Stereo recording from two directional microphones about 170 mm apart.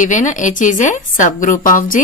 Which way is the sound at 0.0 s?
45° left (ahead or behind).